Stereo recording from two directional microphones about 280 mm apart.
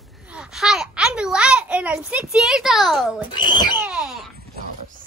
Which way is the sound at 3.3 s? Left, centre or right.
Centre.